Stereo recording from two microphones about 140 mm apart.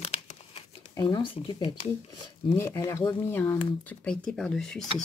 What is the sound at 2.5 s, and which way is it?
Speech, 20° left (ahead or behind).